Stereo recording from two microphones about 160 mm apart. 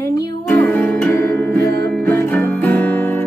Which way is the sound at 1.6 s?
80° right.